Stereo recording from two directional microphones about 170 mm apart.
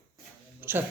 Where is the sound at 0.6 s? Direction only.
10° right (ahead or behind).